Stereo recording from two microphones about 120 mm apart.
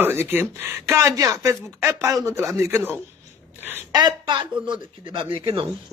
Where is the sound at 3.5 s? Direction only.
15° right (ahead or behind).